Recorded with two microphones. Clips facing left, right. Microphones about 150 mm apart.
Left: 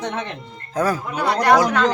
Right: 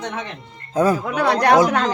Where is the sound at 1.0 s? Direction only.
75° right (ahead or behind).